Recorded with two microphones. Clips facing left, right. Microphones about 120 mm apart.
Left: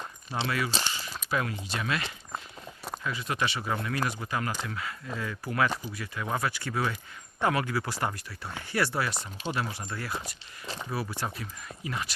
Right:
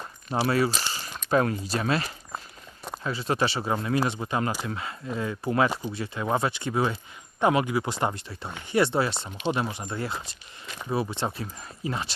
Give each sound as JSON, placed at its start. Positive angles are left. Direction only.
{"t": 0.3, "sound": "speech", "side_deg": -35}
{"t": 0.8, "sound": "a sound", "side_deg": -40}
{"t": 1.3, "sound": "speech", "side_deg": -40}